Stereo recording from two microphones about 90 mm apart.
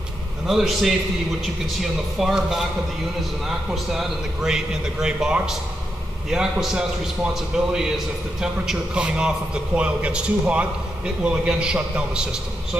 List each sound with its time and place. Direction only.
0.5 s a man's voice: centre (ahead or behind)